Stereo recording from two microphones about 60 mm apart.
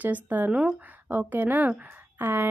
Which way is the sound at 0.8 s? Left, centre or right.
Right.